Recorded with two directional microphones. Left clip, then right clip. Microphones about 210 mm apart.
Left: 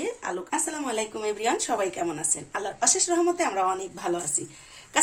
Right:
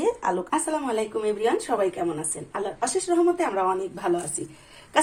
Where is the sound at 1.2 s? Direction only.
35° left (ahead or behind).